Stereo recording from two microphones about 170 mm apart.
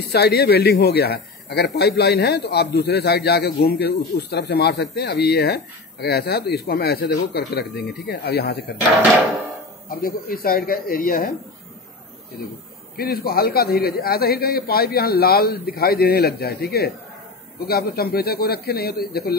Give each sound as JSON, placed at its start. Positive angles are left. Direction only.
{"t": 0.1, "sound": "a man's voice", "side_deg": 70}
{"t": 9.8, "sound": "a man's voice", "side_deg": 60}
{"t": 12.9, "sound": "a man's voice", "side_deg": 60}